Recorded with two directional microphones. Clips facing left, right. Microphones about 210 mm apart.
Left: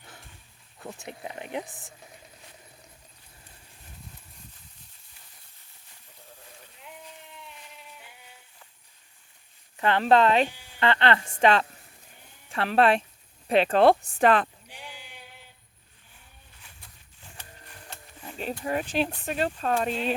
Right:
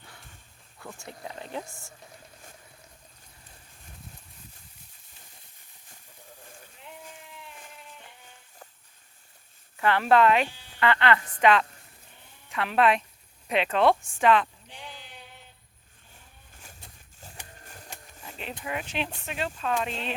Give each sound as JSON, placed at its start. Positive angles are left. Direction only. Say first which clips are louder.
{"t": 0.8, "sound": "speech", "louder": "left 3 dB", "side_deg": 20}
{"t": 7.7, "sound": "a sound", "louder": "right 1 dB", "side_deg": 0}
{"t": 9.7, "sound": "a woman's voice", "louder": "left 1 dB", "side_deg": 20}
{"t": 14.7, "sound": "bleat", "louder": "even", "side_deg": 10}
{"t": 17.4, "sound": "printer", "louder": "even", "side_deg": -15}
{"t": 18.6, "sound": "speech", "louder": "left 5 dB", "side_deg": 40}